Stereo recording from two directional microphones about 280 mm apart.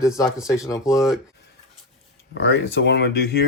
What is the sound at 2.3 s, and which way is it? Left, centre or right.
Speech, left.